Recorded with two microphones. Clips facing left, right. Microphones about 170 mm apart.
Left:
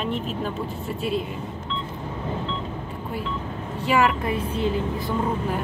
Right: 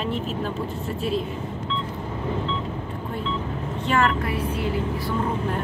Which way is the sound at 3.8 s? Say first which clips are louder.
Left 2 dB; 10° left (ahead or behind).